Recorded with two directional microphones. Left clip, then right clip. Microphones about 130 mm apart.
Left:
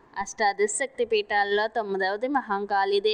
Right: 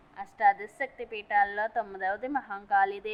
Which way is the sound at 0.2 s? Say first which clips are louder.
Left 1 dB; 55° left (ahead or behind).